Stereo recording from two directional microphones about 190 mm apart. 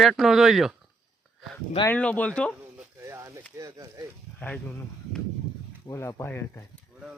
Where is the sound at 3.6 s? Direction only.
15° right (ahead or behind).